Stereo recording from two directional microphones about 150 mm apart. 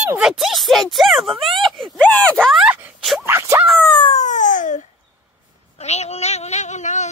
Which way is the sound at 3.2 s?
15° right (ahead or behind).